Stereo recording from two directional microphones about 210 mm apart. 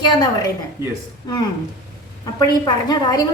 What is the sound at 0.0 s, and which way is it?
Speech, 20° left (ahead or behind).